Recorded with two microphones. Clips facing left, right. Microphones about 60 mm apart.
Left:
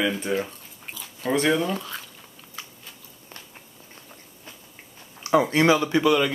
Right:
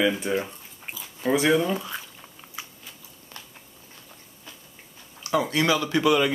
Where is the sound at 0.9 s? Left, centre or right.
Centre.